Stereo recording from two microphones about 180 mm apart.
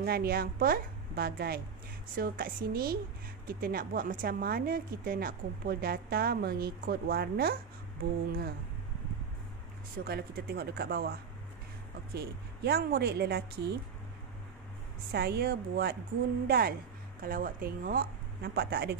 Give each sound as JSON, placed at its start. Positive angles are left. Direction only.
{"t": 0.0, "sound": "a woman's voice", "side_deg": -60}
{"t": 10.0, "sound": "a woman's voice", "side_deg": -60}
{"t": 15.1, "sound": "a woman's voice", "side_deg": -60}